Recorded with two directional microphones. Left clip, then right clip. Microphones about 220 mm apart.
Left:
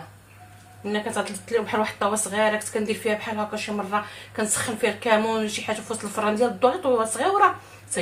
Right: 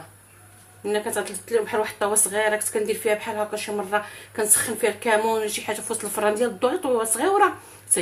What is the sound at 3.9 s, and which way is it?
A woman's voice, 40° right (ahead or behind).